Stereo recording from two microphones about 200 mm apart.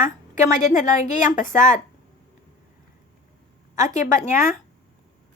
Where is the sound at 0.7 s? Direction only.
40° left (ahead or behind).